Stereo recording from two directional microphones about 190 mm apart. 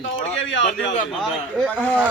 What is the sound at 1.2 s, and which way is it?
Speech, centre (ahead or behind).